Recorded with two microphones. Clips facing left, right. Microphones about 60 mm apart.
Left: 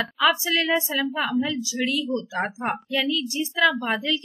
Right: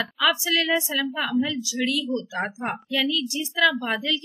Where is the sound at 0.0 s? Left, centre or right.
Left.